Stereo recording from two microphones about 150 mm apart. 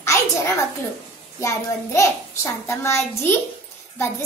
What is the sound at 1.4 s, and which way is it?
A child's voice, 20° left (ahead or behind).